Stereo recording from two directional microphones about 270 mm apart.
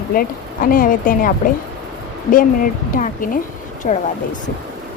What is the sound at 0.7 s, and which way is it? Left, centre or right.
Speech, left.